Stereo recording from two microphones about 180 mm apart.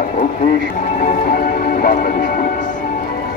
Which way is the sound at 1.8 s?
55° left (ahead or behind).